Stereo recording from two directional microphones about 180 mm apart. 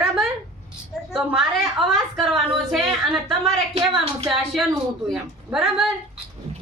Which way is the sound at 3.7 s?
35° right (ahead or behind).